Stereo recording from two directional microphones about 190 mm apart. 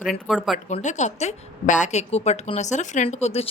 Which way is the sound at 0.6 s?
40° left (ahead or behind).